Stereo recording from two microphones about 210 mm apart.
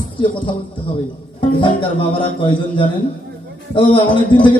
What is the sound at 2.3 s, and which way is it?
A man's voice, 25° left (ahead or behind).